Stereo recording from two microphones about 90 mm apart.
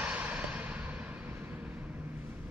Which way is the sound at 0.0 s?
15° right (ahead or behind).